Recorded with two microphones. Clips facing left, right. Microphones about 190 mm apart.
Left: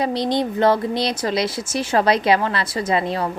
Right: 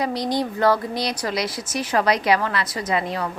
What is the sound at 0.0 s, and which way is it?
A woman's voice, 25° left (ahead or behind).